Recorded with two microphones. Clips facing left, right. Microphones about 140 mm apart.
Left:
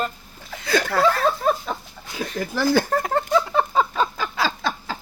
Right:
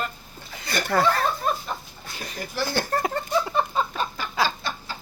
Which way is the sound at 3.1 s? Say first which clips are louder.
Left 4 dB; 90° left.